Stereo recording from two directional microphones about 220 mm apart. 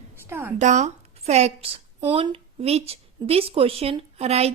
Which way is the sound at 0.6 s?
30° right (ahead or behind).